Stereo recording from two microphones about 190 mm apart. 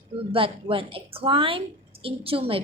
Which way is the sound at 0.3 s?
30° right (ahead or behind).